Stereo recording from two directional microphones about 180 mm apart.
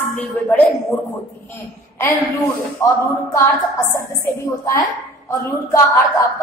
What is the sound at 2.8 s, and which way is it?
Speech, 15° left (ahead or behind).